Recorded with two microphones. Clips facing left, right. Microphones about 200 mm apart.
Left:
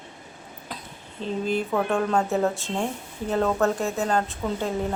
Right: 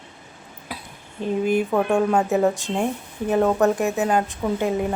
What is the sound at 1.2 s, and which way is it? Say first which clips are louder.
A woman's voice: right 5 dB; 15° right (ahead or behind).